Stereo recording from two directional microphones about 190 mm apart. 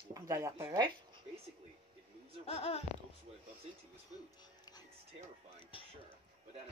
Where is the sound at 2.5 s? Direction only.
30° left (ahead or behind).